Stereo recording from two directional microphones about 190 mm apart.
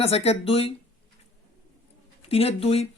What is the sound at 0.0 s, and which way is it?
Speech, 35° left (ahead or behind).